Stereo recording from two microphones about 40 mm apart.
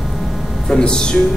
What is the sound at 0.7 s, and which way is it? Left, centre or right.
Speech, centre.